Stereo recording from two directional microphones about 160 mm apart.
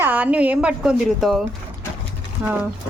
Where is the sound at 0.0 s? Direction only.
10° right (ahead or behind).